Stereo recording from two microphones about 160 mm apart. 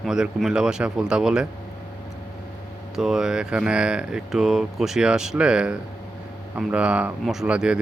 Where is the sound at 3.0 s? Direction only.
5° right (ahead or behind).